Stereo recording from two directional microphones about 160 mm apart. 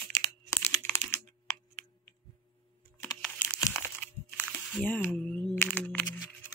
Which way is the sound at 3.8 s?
10° left (ahead or behind).